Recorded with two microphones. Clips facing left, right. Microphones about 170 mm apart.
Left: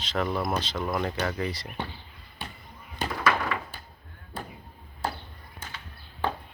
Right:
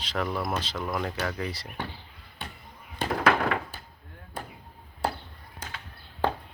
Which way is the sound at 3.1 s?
60° right (ahead or behind).